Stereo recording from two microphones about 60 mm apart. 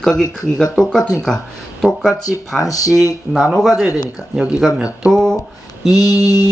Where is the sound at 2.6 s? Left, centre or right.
Left.